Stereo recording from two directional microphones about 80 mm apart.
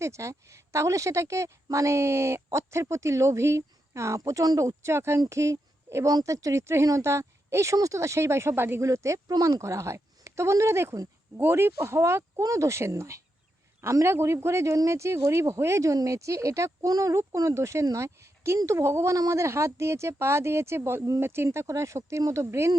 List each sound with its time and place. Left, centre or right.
0.0 s a woman's voice: right